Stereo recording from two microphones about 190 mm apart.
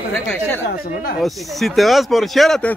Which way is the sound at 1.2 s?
Centre (ahead or behind).